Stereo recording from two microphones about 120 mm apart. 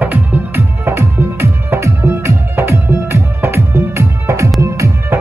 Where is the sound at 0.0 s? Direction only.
15° right (ahead or behind).